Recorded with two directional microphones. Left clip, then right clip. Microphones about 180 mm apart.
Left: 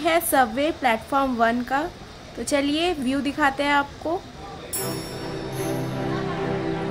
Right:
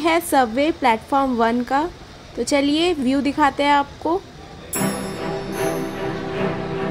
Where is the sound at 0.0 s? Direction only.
15° right (ahead or behind).